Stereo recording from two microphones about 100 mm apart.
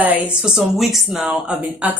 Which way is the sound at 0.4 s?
5° right (ahead or behind).